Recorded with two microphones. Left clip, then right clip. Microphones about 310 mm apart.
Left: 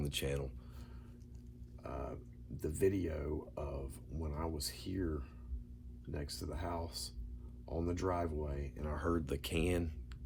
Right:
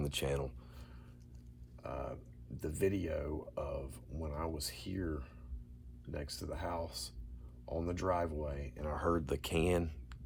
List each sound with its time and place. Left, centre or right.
0.0 s speech: centre
1.8 s a sound: centre
2.6 s speech: centre